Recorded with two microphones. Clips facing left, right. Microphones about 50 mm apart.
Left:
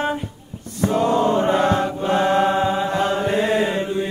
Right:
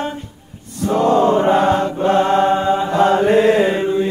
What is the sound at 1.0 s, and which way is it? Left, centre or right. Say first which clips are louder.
Chant: right 5 dB; right.